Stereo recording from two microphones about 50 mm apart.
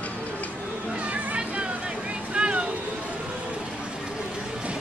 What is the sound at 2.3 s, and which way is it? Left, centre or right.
Vehicle, right.